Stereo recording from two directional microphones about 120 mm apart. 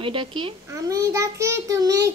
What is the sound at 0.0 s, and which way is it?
Speech, 45° right (ahead or behind).